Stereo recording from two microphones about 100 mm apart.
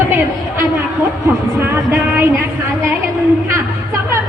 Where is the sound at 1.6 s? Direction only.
20° right (ahead or behind).